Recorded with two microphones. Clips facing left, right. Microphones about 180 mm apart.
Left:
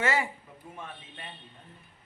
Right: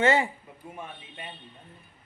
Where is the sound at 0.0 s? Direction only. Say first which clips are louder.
Right 6 dB; 25° right (ahead or behind).